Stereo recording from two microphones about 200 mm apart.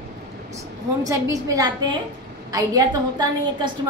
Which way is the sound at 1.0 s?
15° right (ahead or behind).